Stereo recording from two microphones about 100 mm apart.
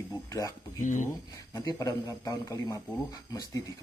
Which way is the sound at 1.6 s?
40° left (ahead or behind).